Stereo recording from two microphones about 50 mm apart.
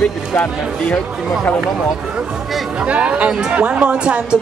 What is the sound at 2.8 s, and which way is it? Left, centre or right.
Speech, right.